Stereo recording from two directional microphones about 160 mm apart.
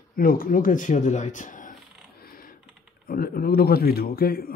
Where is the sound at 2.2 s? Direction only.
65° left (ahead or behind).